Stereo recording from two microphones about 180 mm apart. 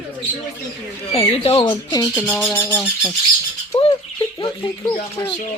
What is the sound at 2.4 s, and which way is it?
Speech, 10° left (ahead or behind).